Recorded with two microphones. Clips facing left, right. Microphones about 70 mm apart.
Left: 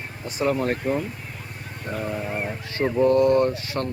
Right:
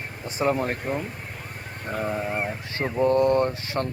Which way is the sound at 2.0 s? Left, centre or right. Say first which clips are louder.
Right 2 dB; right.